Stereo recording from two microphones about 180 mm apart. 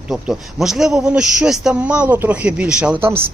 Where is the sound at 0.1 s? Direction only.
Centre (ahead or behind).